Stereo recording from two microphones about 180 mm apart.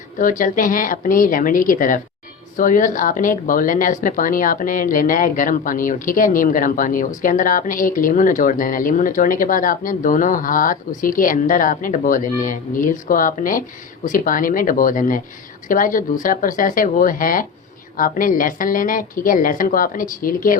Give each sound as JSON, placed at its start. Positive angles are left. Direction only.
{"t": 0.2, "sound": "a woman's voice", "side_deg": 50}